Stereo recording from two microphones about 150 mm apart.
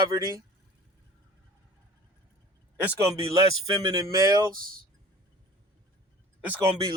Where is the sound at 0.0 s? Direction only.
25° right (ahead or behind).